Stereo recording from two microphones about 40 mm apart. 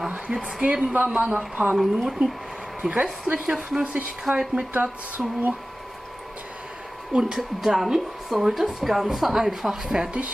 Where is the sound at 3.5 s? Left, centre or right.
Right.